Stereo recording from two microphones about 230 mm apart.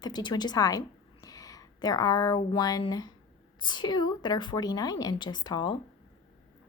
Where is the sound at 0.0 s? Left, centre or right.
Centre.